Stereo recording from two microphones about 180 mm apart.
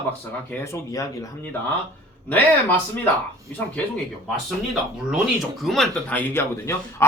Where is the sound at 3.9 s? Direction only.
Centre (ahead or behind).